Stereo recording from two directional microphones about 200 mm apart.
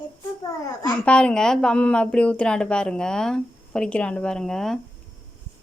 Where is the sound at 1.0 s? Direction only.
5° left (ahead or behind).